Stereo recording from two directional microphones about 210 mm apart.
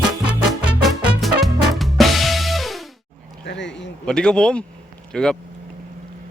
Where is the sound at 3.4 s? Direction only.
55° left (ahead or behind).